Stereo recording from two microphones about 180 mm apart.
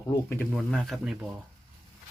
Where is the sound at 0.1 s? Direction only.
10° left (ahead or behind).